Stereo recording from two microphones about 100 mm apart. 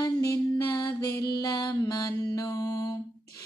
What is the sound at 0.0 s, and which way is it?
Music, 35° left (ahead or behind).